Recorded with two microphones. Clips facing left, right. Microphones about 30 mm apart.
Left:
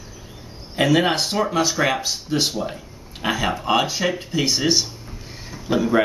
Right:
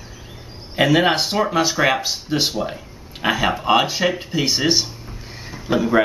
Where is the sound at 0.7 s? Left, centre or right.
Centre.